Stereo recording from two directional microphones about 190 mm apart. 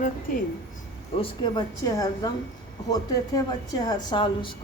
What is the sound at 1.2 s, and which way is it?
Speech, 25° left (ahead or behind).